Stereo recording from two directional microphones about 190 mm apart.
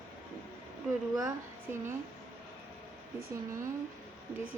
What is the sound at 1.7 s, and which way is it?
Speech, 10° right (ahead or behind).